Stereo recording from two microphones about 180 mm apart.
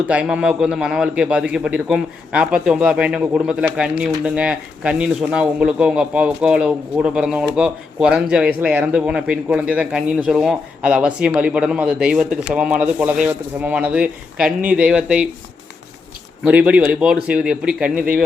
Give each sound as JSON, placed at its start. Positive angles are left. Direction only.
{"t": 0.1, "sound": "a man's voice", "side_deg": -5}
{"t": 16.4, "sound": "a man's voice", "side_deg": -10}
{"t": 17.9, "sound": "speech", "side_deg": -50}